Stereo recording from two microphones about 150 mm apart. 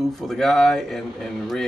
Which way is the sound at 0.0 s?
Centre (ahead or behind).